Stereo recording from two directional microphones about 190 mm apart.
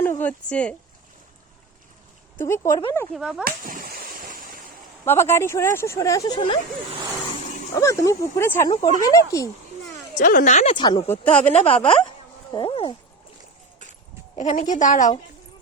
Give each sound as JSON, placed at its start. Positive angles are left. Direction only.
{"t": 0.0, "sound": "speech", "side_deg": 10}
{"t": 2.4, "sound": "speech", "side_deg": 15}
{"t": 3.1, "sound": "speech", "side_deg": 0}
{"t": 3.4, "sound": "splash", "side_deg": -45}
{"t": 5.0, "sound": "speech", "side_deg": 15}
{"t": 7.8, "sound": "speech", "side_deg": 15}
{"t": 10.2, "sound": "a woman's voice", "side_deg": 45}
{"t": 10.8, "sound": "speech", "side_deg": 25}
{"t": 11.1, "sound": "speech", "side_deg": 10}
{"t": 11.5, "sound": "a woman's voice", "side_deg": 30}
{"t": 14.3, "sound": "a woman's voice", "side_deg": 40}